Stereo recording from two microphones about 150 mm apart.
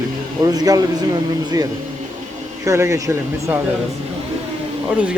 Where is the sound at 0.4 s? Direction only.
25° right (ahead or behind).